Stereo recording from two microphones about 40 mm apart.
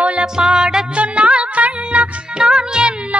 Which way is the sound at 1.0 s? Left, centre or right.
Right.